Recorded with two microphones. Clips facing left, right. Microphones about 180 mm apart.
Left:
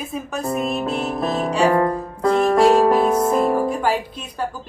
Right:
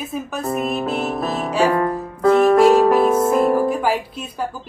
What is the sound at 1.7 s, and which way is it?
Music, 25° left (ahead or behind).